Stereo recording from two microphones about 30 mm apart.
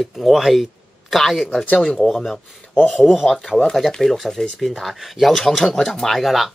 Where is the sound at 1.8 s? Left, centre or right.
Centre.